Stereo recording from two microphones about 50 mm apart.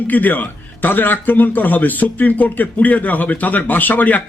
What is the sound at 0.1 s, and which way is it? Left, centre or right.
A man's voice, left.